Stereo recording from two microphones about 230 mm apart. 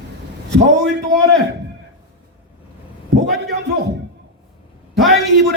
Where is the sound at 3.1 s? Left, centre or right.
Right.